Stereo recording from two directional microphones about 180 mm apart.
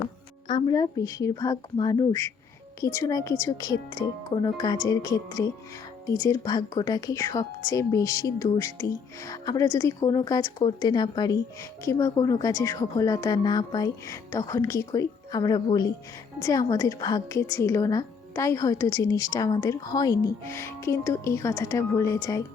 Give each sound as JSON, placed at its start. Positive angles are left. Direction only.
{"t": 0.4, "sound": "a woman's voice", "side_deg": 25}